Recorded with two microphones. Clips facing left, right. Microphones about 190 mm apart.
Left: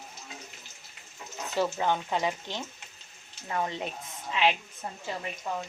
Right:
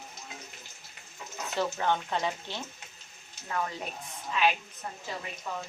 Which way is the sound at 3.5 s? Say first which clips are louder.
Left 2 dB; 25° left (ahead or behind).